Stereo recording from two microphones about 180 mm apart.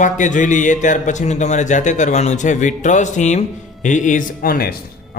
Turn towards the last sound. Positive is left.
turn(degrees=55)  # may be behind; listen again after turning